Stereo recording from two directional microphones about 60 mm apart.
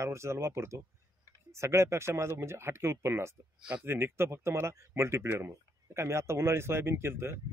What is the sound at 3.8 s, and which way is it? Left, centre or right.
Speech, right.